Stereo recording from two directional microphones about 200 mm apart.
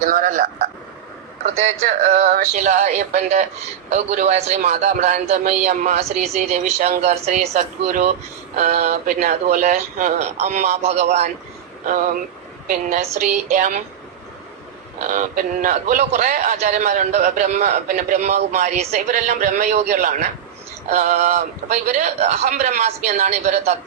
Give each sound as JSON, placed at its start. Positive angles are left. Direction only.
{"t": 0.0, "sound": "speech", "side_deg": -45}
{"t": 1.8, "sound": "a man's voice", "side_deg": -30}
{"t": 13.1, "sound": "a man's voice", "side_deg": -40}
{"t": 15.0, "sound": "a man's voice", "side_deg": -40}